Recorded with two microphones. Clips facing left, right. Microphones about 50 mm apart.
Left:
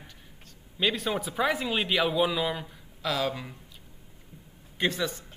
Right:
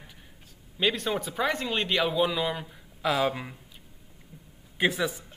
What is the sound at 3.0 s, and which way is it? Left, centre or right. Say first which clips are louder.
Speech: right 3 dB; centre.